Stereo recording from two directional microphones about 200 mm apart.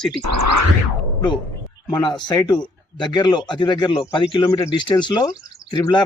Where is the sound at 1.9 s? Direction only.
20° left (ahead or behind).